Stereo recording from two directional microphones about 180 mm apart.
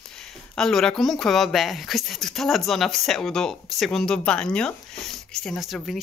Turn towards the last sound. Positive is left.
turn(degrees=0)  # may be behind; listen again after turning